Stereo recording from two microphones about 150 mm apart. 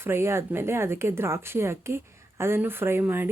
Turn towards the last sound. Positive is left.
turn(degrees=-15)  # may be behind; listen again after turning